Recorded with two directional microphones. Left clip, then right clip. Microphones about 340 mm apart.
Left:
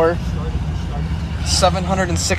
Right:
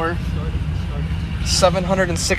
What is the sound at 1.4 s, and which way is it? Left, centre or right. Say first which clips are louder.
Speech: even; centre.